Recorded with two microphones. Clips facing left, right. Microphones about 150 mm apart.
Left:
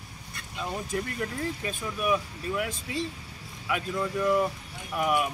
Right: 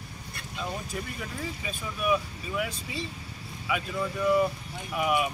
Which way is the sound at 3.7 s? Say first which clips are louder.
Left 1 dB; 5° right (ahead or behind).